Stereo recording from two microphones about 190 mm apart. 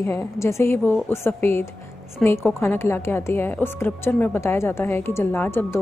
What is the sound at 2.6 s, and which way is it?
A woman's voice, 15° left (ahead or behind).